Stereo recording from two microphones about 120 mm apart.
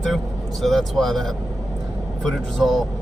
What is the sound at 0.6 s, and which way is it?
Speech, centre (ahead or behind).